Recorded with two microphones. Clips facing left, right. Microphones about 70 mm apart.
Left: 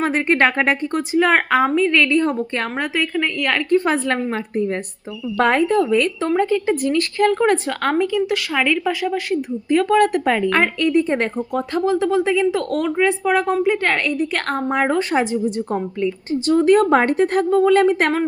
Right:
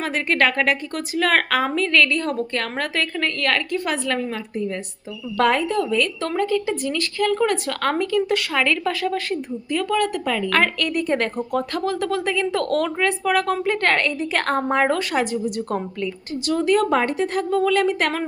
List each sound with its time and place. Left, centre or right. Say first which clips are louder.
0.0 s a woman's voice: left 4 dB; left
2.7 s a woman's voice: left 5 dB; centre
3.7 s a woman's voice: left 6 dB; left
6.2 s a woman's voice: left 4 dB; left
6.7 s a woman's voice: left 5 dB; left
7.7 s a woman's voice: left 2 dB; centre
8.3 s a woman's voice: left 1 dB; centre
9.6 s a woman's voice: left 7 dB; left
10.5 s a woman's voice: left 4 dB; centre
14.9 s a woman's voice: left 4 dB; left
16.5 s a woman's voice: left 5 dB; left